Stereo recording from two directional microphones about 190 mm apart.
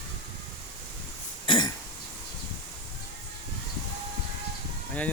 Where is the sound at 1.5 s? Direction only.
25° left (ahead or behind).